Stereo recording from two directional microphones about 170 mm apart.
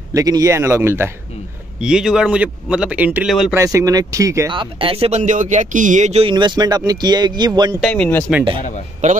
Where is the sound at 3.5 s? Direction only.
20° right (ahead or behind).